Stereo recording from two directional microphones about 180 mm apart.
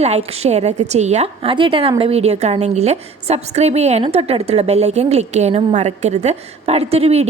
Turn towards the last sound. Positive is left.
turn(degrees=-35)  # may be behind; listen again after turning